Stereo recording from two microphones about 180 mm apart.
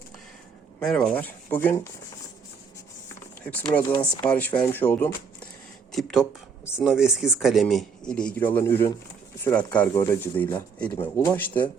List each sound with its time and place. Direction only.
0.8 s speech: 5° left (ahead or behind)
3.8 s speech: 20° left (ahead or behind)
4.3 s speech: 5° left (ahead or behind)